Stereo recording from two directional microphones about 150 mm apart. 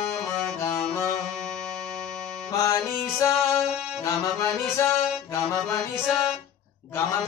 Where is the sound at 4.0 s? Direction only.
20° left (ahead or behind).